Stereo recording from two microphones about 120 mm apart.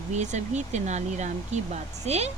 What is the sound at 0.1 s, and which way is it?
Speech, 75° right (ahead or behind).